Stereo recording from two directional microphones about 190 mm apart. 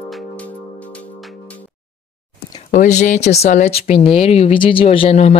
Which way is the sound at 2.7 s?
40° left (ahead or behind).